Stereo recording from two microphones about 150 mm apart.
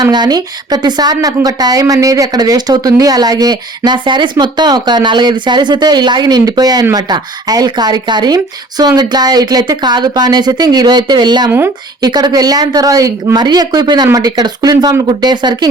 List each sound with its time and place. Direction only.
0.0 s speech: 25° right (ahead or behind)